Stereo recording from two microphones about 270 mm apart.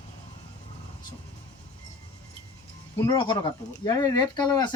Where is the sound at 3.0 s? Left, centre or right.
Centre.